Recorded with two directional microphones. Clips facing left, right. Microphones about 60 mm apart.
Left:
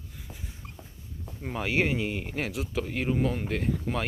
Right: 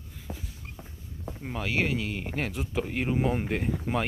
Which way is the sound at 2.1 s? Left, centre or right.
Centre.